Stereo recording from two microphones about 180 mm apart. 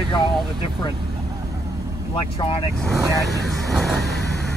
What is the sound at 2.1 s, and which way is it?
Speech, 30° left (ahead or behind).